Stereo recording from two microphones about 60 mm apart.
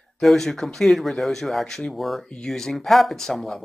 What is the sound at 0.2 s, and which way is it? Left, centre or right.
Speech, centre.